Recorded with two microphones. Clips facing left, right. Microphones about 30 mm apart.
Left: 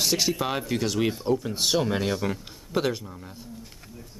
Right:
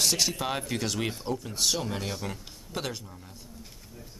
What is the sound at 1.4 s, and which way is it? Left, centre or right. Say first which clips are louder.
Speech: left 5 dB; left.